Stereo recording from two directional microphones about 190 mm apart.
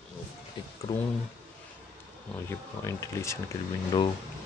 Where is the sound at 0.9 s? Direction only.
20° left (ahead or behind).